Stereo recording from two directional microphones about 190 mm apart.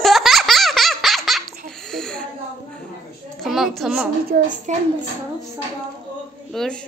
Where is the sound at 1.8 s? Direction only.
Centre (ahead or behind).